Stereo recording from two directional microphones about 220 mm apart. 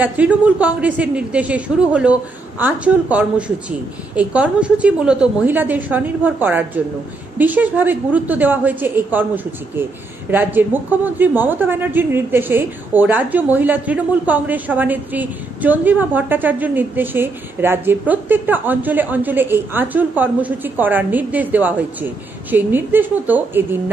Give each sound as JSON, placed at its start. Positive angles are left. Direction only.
{"t": 0.0, "sound": "a woman's voice", "side_deg": -5}